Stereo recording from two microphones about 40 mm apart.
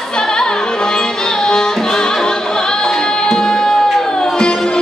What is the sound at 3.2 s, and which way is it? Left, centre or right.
Music, centre.